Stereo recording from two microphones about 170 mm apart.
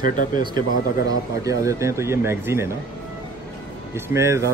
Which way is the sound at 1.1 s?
20° right (ahead or behind).